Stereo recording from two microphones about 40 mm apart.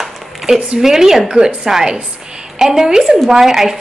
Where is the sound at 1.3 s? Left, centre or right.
Right.